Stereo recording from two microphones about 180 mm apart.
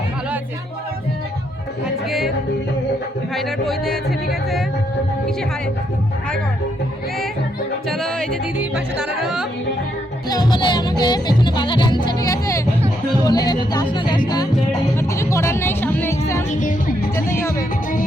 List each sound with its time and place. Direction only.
2.0 s music: centre (ahead or behind)
3.3 s music: centre (ahead or behind)
7.9 s music: centre (ahead or behind)
10.2 s music: 20° left (ahead or behind)
13.2 s speech: 20° left (ahead or behind)
14.3 s music: 20° left (ahead or behind)
16.6 s music: 50° left (ahead or behind)